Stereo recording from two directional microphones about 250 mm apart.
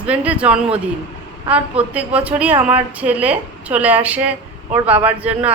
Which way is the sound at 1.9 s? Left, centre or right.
Centre.